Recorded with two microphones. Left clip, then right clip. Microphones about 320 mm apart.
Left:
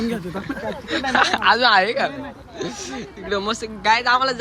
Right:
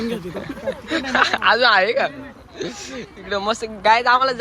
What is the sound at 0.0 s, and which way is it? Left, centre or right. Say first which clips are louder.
Speech: even; centre.